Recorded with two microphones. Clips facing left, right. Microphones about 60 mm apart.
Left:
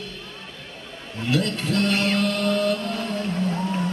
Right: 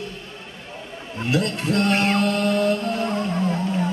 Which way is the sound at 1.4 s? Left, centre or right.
Right.